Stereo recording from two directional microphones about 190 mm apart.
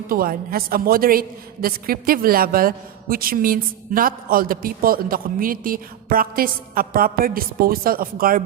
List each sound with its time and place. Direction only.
0.1 s a woman's voice: 50° right (ahead or behind)